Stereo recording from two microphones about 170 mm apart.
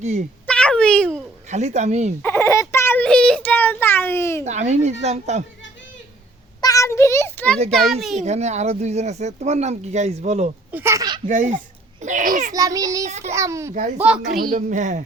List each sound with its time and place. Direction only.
0.0 s speech: 40° right (ahead or behind)
0.4 s a sound: 5° left (ahead or behind)
1.5 s speech: 40° right (ahead or behind)
2.2 s a sound: 15° left (ahead or behind)
4.4 s speech: 45° right (ahead or behind)
6.6 s a sound: 20° left (ahead or behind)
8.2 s speech: 40° right (ahead or behind)
10.7 s a sound: 15° right (ahead or behind)
11.3 s a child's voice: 50° right (ahead or behind)
12.5 s a child's voice: 20° right (ahead or behind)
13.1 s speech: 40° right (ahead or behind)
13.3 s a child's voice: 15° right (ahead or behind)
14.0 s a child's voice: 5° right (ahead or behind)
14.5 s speech: 45° right (ahead or behind)